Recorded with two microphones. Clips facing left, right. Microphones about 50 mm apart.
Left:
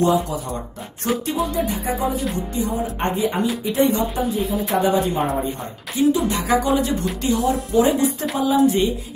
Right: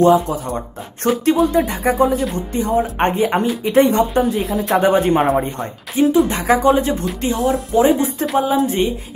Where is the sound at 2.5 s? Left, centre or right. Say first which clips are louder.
Right 6 dB; right.